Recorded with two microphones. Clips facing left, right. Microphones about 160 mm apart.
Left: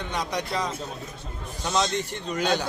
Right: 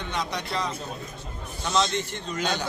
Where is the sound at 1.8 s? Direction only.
35° left (ahead or behind).